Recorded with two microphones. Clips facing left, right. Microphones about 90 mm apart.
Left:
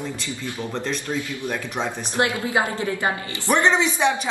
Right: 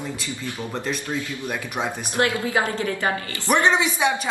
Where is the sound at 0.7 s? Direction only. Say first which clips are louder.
Even; 15° right (ahead or behind).